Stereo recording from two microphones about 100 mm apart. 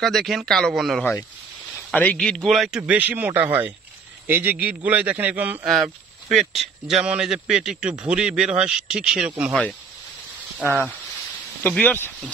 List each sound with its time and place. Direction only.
0.0 s a man's voice: centre (ahead or behind)
2.5 s a man's voice: centre (ahead or behind)
2.9 s a man's voice: 15° right (ahead or behind)
5.7 s a man's voice: centre (ahead or behind)
9.5 s speech: 10° left (ahead or behind)